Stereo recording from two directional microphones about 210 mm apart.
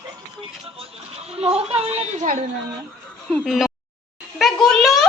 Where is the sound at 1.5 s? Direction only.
30° right (ahead or behind).